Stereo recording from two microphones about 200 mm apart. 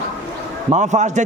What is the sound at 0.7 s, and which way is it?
Speech, 35° right (ahead or behind).